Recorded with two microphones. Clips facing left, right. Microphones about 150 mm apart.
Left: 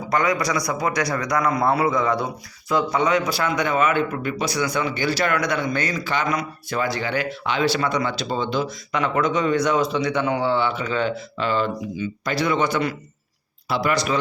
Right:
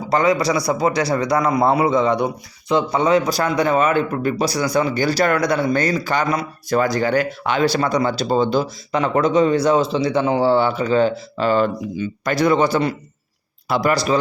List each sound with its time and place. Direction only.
0.1 s a man's voice: 30° right (ahead or behind)
13.7 s speech: 50° right (ahead or behind)
13.9 s a man's voice: 35° right (ahead or behind)